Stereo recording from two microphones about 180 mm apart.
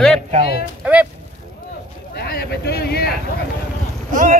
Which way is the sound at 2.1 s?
60° left (ahead or behind).